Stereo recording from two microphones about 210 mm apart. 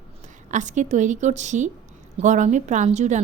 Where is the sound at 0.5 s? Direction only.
35° right (ahead or behind).